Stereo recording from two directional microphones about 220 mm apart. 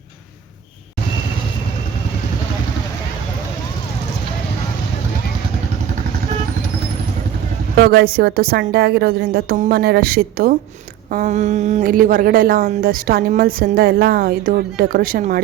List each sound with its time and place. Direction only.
7.9 s a woman's voice: 45° right (ahead or behind)